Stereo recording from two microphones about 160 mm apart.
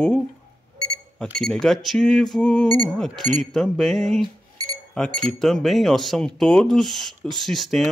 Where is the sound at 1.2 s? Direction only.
5° left (ahead or behind).